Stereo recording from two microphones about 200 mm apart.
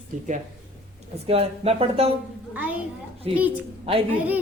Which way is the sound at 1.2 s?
30° right (ahead or behind).